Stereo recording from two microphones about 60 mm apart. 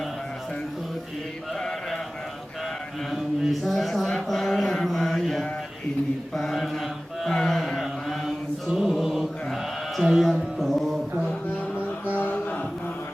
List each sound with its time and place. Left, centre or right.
1.5 s mantra: centre
3.1 s mantra: centre
10.0 s speech: centre
10.6 s music: centre
11.7 s music: left
12.1 s a sound: left